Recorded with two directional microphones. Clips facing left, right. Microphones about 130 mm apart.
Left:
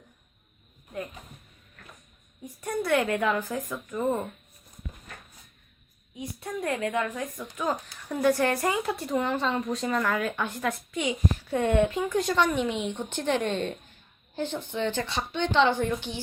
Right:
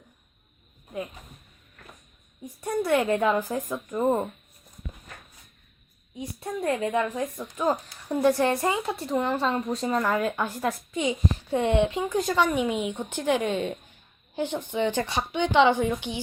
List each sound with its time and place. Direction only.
2.6 s speech: 20° right (ahead or behind)
6.1 s speech: 30° right (ahead or behind)
8.7 s speech: centre (ahead or behind)
9.7 s speech: 30° right (ahead or behind)
10.3 s speech: 5° right (ahead or behind)
11.0 s speech: 20° right (ahead or behind)
12.1 s a woman's voice: 5° right (ahead or behind)